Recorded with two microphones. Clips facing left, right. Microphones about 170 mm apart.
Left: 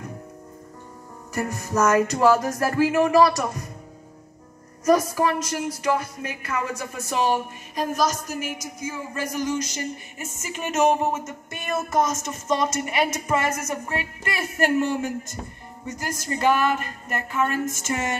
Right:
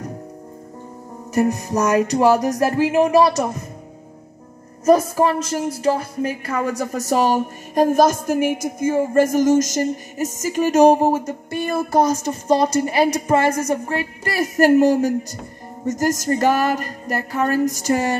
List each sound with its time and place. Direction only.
1.3 s music: 20° right (ahead or behind)
4.8 s speech: 30° right (ahead or behind)